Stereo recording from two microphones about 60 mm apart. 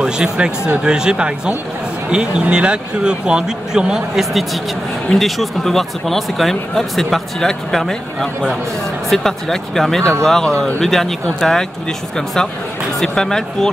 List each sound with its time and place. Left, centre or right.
0.0 s speech: centre
13.0 s speech: centre